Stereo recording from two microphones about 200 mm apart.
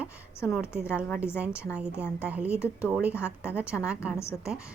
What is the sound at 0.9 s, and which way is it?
A woman's voice, 5° right (ahead or behind).